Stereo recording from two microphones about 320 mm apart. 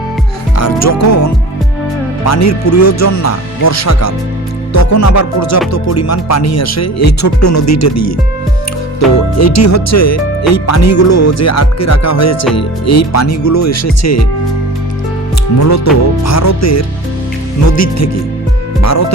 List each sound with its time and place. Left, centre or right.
0.5 s music: left
2.2 s speech: left
9.4 s speech: left
15.5 s speech: left